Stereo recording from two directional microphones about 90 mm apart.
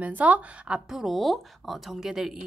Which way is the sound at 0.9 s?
Centre (ahead or behind).